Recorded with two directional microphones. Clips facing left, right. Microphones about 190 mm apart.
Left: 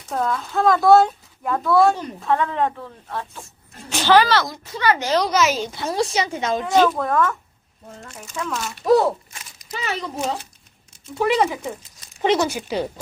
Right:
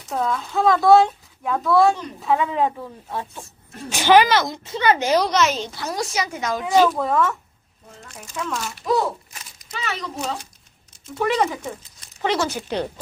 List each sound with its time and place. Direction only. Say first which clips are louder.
0.1 s a woman's voice: even; centre (ahead or behind); by 5.2 s 20° right (ahead or behind)
5.2 s speech: left 1 dB; 5° left (ahead or behind)
5.7 s a woman's voice: left 4 dB; 25° left (ahead or behind)
6.6 s a woman's voice: right 1 dB; centre (ahead or behind)
8.4 s a woman's voice: even; centre (ahead or behind)
9.7 s a woman's voice: left 2 dB; 30° left (ahead or behind)
11.1 s speech: left 2 dB; 10° left (ahead or behind)